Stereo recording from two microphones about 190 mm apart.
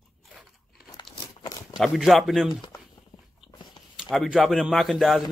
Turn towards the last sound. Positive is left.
turn(degrees=0)  # may be behind; listen again after turning